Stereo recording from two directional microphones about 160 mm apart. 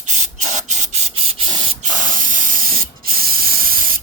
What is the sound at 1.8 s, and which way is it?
Spray, 55° right (ahead or behind).